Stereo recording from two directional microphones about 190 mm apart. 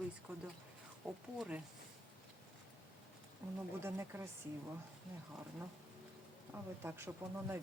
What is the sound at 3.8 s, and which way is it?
Speech, 15° right (ahead or behind).